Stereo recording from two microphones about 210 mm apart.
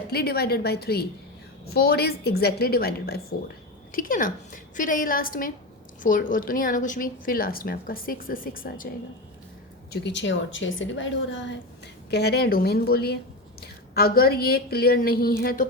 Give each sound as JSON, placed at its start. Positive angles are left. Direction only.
{"t": 0.1, "sound": "a woman's voice", "side_deg": 50}
{"t": 9.9, "sound": "a woman's voice", "side_deg": 55}
{"t": 12.1, "sound": "speech", "side_deg": 50}